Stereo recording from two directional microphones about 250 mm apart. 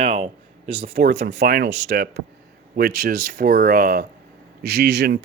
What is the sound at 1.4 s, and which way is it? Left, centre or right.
Speech, right.